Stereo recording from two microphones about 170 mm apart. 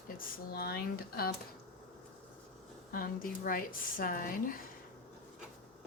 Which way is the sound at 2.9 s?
60° left (ahead or behind).